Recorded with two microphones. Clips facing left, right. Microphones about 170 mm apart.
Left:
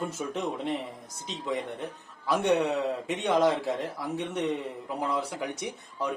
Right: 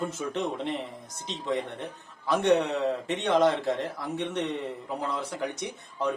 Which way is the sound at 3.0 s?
5° left (ahead or behind).